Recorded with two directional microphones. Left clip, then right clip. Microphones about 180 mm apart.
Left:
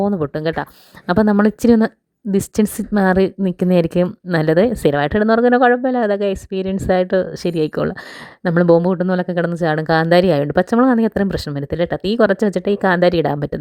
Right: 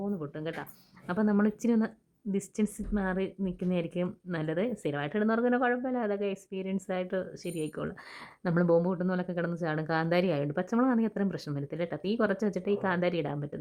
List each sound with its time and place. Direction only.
0.0 s speech: 50° left (ahead or behind)
8.4 s speech: 40° left (ahead or behind)